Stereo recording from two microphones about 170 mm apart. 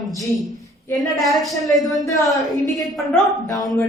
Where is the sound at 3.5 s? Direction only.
20° left (ahead or behind).